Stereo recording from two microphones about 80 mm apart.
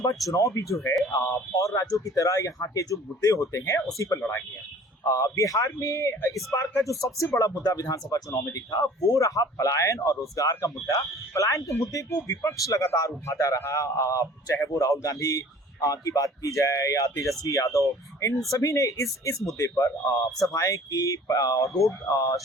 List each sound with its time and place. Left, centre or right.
0.0 s a man's voice: left